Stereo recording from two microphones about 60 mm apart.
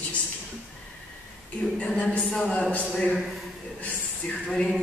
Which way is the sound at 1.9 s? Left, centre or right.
Centre.